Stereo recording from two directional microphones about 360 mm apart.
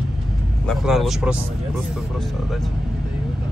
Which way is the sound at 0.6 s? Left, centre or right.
Centre.